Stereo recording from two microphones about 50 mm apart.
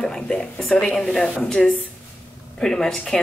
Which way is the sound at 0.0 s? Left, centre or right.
Centre.